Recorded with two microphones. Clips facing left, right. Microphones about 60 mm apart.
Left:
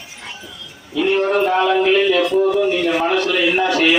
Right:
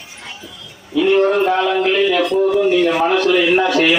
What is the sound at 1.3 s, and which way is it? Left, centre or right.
A man's voice, centre.